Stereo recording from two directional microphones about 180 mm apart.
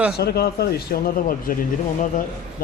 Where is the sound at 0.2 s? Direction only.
60° left (ahead or behind).